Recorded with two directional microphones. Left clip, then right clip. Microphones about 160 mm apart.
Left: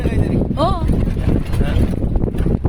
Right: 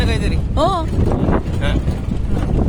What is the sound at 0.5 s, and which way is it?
Speech, 90° right.